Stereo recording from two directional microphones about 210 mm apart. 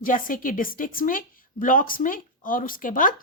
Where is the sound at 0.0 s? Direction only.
40° left (ahead or behind).